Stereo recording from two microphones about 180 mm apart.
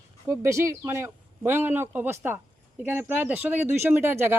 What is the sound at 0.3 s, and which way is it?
Speech, 15° right (ahead or behind).